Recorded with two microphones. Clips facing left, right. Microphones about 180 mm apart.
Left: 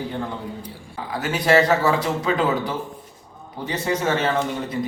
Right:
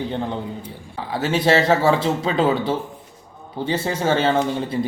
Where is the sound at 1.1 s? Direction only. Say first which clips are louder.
Right 1 dB; 25° right (ahead or behind).